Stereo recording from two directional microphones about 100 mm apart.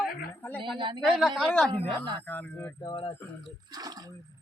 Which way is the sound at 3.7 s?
40° right (ahead or behind).